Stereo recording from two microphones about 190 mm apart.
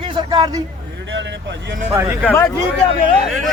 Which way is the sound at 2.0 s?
15° right (ahead or behind).